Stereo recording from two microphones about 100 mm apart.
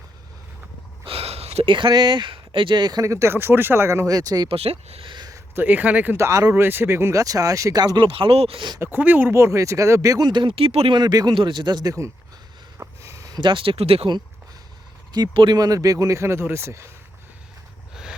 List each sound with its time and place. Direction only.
1.0 s a sound: 80° right
1.6 s speech: 55° right (ahead or behind)
4.4 s speech: 80° right
5.0 s a sound: 50° right (ahead or behind)
5.5 s speech: 15° right (ahead or behind)
6.1 s speech: 30° right (ahead or behind); by 8.6 s 70° right (ahead or behind)
8.8 s speech: 20° right (ahead or behind); by 10.4 s 45° right (ahead or behind)
10.4 s speech: 65° right (ahead or behind)
10.9 s speech: 40° right (ahead or behind)
12.8 s a sound: 30° right (ahead or behind)
13.4 s speech: 55° right (ahead or behind); by 14.1 s 80° right
15.3 s speech: 55° right (ahead or behind)
15.5 s speech: 35° right (ahead or behind)